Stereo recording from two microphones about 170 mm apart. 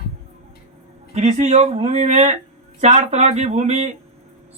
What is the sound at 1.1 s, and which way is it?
Speech, 40° right (ahead or behind).